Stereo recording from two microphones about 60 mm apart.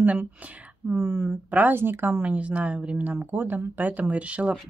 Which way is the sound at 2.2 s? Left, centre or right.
Right.